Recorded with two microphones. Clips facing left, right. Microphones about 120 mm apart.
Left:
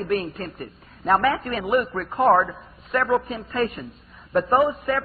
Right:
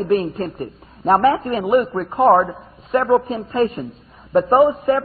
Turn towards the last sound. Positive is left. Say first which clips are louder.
# right 6 dB
turn(degrees=-30)  # may be behind; listen again after turning